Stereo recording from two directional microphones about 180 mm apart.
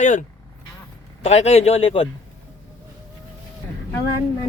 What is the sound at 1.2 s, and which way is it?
Speech, 35° left (ahead or behind).